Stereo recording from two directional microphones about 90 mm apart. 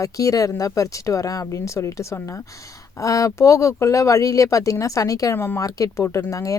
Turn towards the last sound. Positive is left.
turn(degrees=35)  # may be behind; listen again after turning